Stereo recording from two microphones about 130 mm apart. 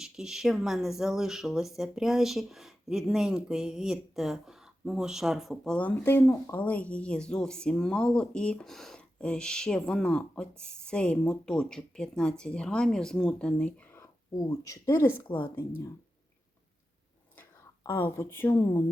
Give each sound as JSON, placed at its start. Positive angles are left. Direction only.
{"t": 0.0, "sound": "speech", "side_deg": -5}
{"t": 14.3, "sound": "speech", "side_deg": 25}
{"t": 17.8, "sound": "a woman's voice", "side_deg": 15}